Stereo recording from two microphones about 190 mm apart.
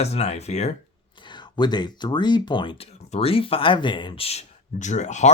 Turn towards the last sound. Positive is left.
turn(degrees=40)  # may be behind; listen again after turning